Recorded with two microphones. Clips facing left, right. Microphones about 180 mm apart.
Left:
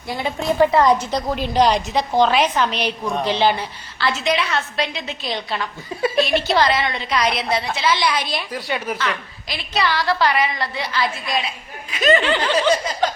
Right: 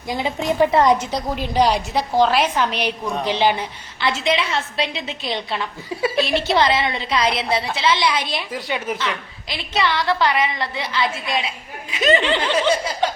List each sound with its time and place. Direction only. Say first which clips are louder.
0.1 s a woman's voice: even; 20° right (ahead or behind)